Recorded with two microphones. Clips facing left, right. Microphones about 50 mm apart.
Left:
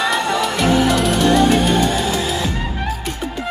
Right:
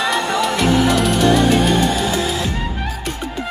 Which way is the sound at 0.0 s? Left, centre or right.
Centre.